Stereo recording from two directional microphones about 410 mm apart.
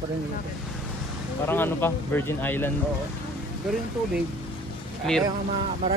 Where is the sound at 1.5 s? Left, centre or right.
Centre.